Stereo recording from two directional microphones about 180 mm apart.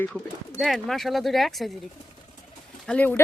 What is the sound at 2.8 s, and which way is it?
Speech, 5° left (ahead or behind).